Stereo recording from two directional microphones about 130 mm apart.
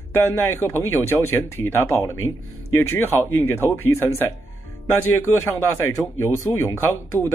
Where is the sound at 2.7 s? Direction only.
15° left (ahead or behind).